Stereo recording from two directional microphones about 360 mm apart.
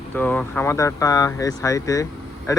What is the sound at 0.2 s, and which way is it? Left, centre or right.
Speech, centre.